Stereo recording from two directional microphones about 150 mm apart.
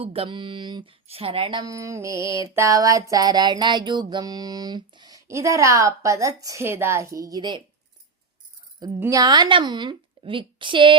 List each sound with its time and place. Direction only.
0.0 s a woman's voice: 40° right (ahead or behind)
1.6 s mantra: 20° right (ahead or behind)
9.0 s a woman's voice: 20° right (ahead or behind)